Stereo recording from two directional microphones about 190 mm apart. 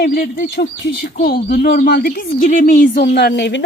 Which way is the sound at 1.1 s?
50° left (ahead or behind).